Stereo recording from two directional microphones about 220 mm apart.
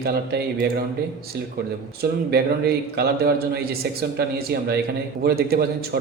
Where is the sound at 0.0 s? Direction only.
45° right (ahead or behind).